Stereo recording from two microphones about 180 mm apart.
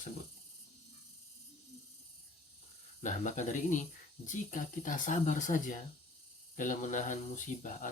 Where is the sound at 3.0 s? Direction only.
45° left (ahead or behind).